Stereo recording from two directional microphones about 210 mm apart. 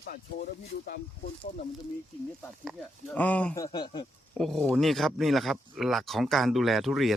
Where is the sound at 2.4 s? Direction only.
5° left (ahead or behind).